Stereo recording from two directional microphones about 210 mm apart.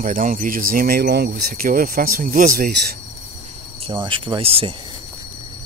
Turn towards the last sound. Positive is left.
turn(degrees=-25)  # may be behind; listen again after turning